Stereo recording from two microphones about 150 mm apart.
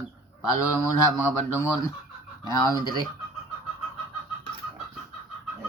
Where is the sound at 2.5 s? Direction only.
25° left (ahead or behind).